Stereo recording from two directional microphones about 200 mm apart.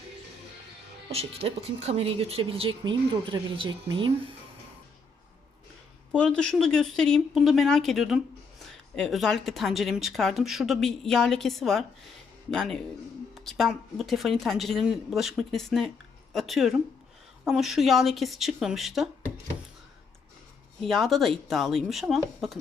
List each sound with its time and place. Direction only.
1.1 s speech: 30° right (ahead or behind)
6.1 s speech: 5° left (ahead or behind)
20.8 s speech: centre (ahead or behind)